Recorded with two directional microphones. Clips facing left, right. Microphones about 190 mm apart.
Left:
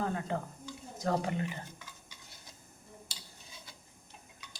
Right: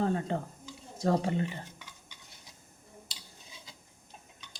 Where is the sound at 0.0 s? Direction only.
30° right (ahead or behind).